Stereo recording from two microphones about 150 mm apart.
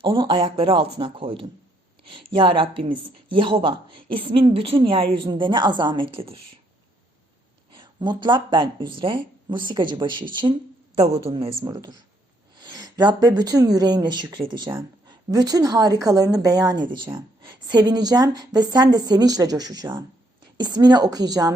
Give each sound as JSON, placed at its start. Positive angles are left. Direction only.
{"t": 0.0, "sound": "speech", "side_deg": -35}
{"t": 7.7, "sound": "speech", "side_deg": -30}
{"t": 11.6, "sound": "a woman's voice", "side_deg": -25}